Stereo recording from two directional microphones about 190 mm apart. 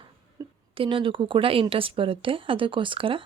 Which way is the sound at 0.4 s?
20° right (ahead or behind).